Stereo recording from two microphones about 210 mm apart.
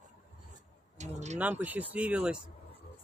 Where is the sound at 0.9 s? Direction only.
35° right (ahead or behind).